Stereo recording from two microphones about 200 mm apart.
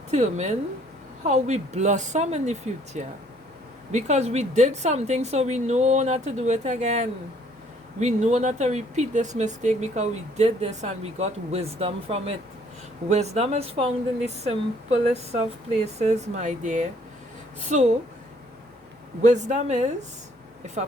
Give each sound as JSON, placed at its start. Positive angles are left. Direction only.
{"t": 0.1, "sound": "speech", "side_deg": -35}
{"t": 19.2, "sound": "speech", "side_deg": -35}